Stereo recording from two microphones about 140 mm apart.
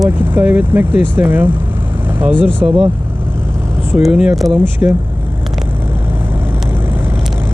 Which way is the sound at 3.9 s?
5° right (ahead or behind).